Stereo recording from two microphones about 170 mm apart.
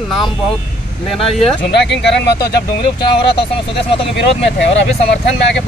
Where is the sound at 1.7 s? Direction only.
90° left.